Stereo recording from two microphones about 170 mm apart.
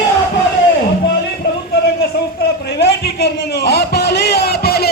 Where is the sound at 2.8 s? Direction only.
75° left (ahead or behind).